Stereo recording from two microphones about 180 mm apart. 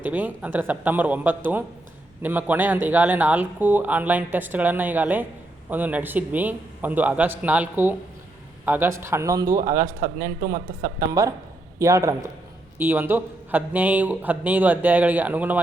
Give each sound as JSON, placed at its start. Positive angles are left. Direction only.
{"t": 0.0, "sound": "speech", "side_deg": -10}
{"t": 10.2, "sound": "speech", "side_deg": -50}
{"t": 11.1, "sound": "speech", "side_deg": -20}